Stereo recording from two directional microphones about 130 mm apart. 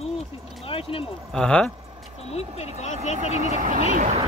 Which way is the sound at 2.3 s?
55° left (ahead or behind).